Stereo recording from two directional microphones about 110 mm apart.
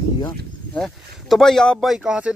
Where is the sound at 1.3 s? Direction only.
5° left (ahead or behind).